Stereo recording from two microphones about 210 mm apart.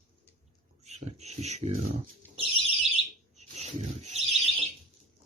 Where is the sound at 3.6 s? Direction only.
30° right (ahead or behind).